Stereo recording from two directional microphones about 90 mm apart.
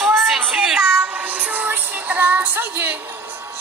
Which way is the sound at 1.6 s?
20° right (ahead or behind).